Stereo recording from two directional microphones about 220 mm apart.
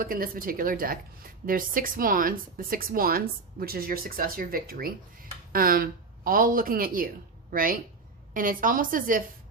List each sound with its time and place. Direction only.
0.0 s a woman's voice: 40° right (ahead or behind)